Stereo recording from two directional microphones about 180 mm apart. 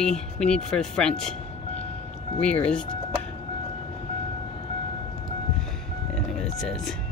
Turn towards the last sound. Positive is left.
turn(degrees=5)  # may be behind; listen again after turning